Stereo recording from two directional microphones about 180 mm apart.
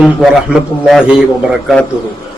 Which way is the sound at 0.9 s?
5° right (ahead or behind).